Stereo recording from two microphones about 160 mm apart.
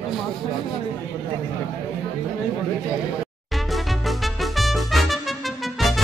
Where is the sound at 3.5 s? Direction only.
Centre (ahead or behind).